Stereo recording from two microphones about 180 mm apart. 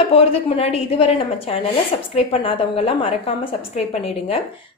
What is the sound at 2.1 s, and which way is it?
A woman's voice, 35° left (ahead or behind).